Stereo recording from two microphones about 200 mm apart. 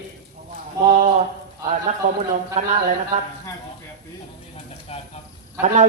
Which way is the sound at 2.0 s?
35° right (ahead or behind).